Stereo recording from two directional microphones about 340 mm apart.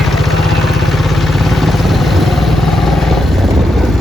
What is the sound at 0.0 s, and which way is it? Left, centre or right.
Vehicle, centre.